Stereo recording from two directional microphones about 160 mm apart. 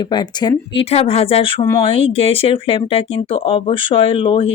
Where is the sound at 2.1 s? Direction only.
35° left (ahead or behind).